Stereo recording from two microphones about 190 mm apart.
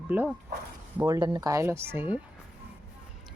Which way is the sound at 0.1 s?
10° right (ahead or behind).